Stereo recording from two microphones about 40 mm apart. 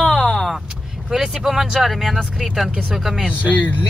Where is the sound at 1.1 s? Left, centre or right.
Centre.